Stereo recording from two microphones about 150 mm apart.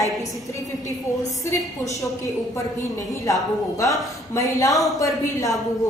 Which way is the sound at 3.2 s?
20° left (ahead or behind).